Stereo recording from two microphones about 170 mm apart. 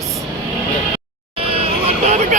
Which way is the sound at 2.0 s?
45° right (ahead or behind).